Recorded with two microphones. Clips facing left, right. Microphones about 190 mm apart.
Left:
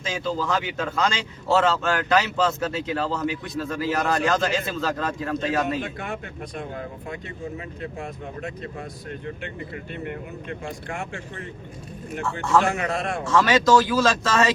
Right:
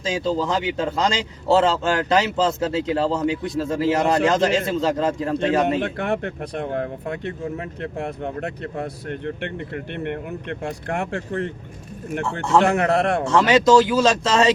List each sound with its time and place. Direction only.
0.0 s a man's voice: 30° right (ahead or behind)
5.8 s speech: 65° right (ahead or behind)
12.6 s speech: 65° right (ahead or behind)
13.2 s a man's voice: 25° right (ahead or behind)